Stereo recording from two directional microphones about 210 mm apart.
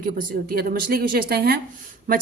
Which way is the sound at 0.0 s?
45° right (ahead or behind).